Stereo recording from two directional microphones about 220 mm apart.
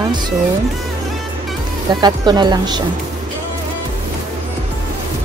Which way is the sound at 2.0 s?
20° right (ahead or behind).